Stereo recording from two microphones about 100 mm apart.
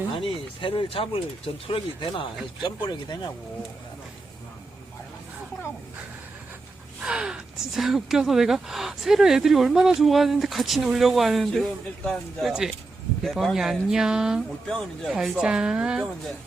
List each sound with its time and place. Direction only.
0.1 s speech: 60° left (ahead or behind)
7.0 s speech: 5° right (ahead or behind)
14.7 s speech: 5° left (ahead or behind)
15.2 s a woman's voice: 5° right (ahead or behind)